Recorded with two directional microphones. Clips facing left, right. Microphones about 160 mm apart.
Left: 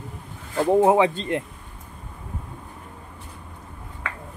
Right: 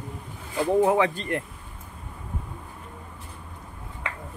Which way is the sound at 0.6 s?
20° left (ahead or behind).